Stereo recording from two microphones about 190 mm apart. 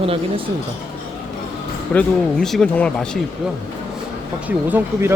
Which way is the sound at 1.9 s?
5° left (ahead or behind).